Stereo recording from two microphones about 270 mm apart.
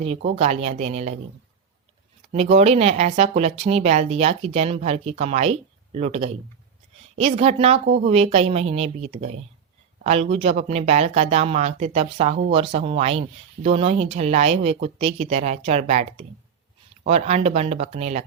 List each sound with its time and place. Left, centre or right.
0.0 s speech: right
2.3 s speech: right